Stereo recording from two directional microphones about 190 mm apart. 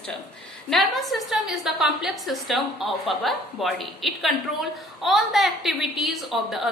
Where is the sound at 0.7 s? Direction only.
Centre (ahead or behind).